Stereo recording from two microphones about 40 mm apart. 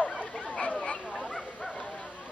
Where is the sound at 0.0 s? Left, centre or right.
Left.